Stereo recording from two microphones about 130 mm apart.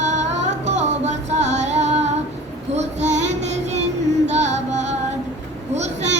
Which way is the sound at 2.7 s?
60° right (ahead or behind).